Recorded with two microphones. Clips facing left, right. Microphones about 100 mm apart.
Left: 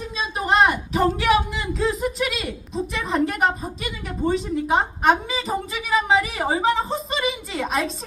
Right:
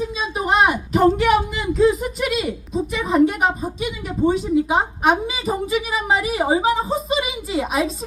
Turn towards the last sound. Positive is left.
turn(degrees=-5)  # may be behind; listen again after turning